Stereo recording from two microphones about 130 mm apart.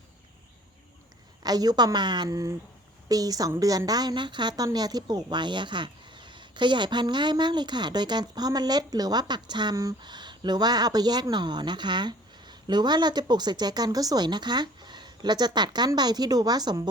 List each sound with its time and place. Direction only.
1.4 s a woman's voice: 30° right (ahead or behind)